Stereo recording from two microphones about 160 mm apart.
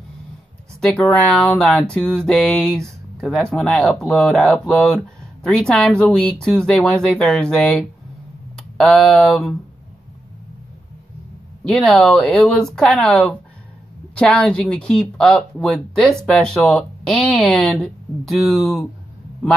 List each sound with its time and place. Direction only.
0.7 s speech: centre (ahead or behind)
11.6 s speech: 5° left (ahead or behind)